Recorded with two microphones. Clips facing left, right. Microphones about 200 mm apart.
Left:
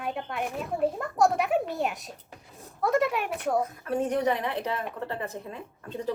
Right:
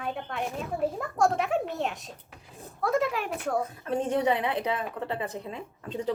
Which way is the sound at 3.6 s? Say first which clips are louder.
Left 1 dB; 25° right (ahead or behind).